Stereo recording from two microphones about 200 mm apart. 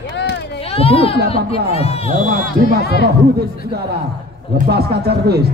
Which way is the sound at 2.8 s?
55° left (ahead or behind).